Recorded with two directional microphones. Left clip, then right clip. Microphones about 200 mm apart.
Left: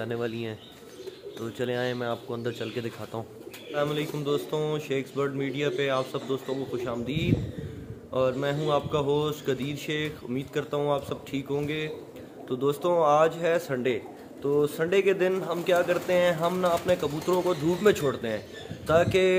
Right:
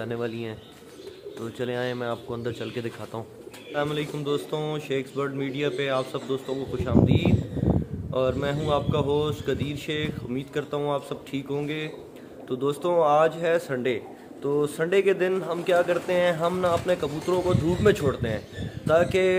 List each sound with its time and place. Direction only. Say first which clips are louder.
0.0 s a man's voice: right 1 dB; centre (ahead or behind)